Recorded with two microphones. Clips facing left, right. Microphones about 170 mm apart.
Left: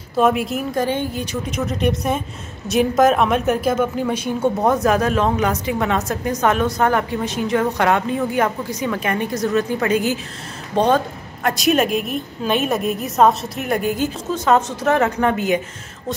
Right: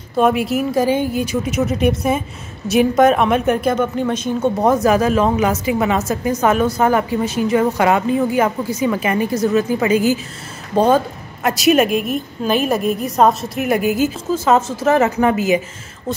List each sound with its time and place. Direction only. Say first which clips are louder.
0.2 s a woman's voice: right 2 dB; centre (ahead or behind)
4.6 s a woman's voice: right 4 dB; centre (ahead or behind)